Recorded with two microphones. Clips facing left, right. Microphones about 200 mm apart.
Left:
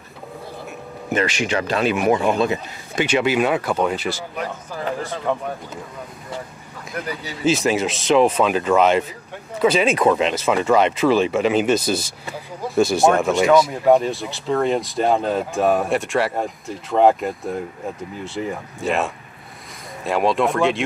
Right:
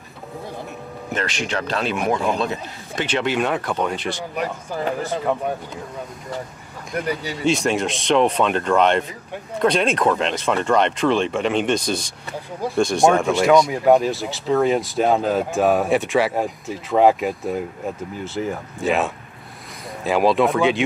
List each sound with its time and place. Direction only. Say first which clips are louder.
1.1 s speech: left 4 dB; 5° left (ahead or behind)
7.4 s speech: left 1 dB; centre (ahead or behind)